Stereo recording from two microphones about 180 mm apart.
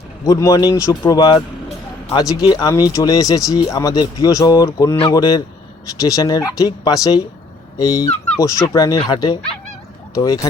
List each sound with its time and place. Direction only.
0.3 s speech: 20° left (ahead or behind)